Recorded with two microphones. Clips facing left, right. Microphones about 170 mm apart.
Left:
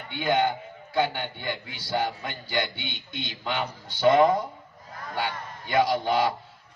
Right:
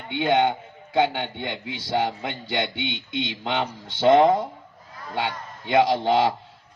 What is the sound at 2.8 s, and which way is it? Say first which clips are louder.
Speech: right 8 dB; 90° right.